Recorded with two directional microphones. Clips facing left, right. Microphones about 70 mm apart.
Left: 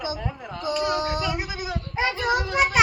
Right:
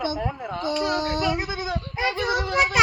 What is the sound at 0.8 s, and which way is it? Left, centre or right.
Child singing, centre.